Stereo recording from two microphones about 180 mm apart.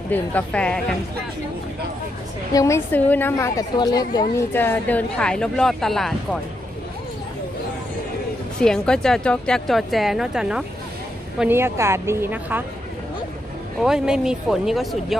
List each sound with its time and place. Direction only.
0.1 s a woman's voice: 10° left (ahead or behind)
2.5 s a woman's voice: 20° left (ahead or behind)
4.5 s speech: 10° left (ahead or behind)
8.6 s a woman's voice: 5° left (ahead or behind)
13.7 s speech: 5° right (ahead or behind)